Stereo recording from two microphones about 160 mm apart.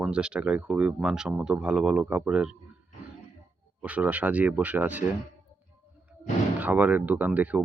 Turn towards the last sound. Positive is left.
turn(degrees=-10)  # may be behind; listen again after turning